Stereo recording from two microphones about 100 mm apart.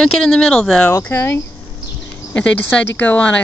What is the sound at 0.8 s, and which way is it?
Speech, 25° left (ahead or behind).